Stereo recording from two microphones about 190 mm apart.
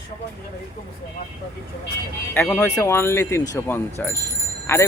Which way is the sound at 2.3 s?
10° left (ahead or behind).